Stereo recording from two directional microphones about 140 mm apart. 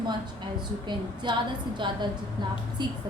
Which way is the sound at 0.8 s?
35° right (ahead or behind).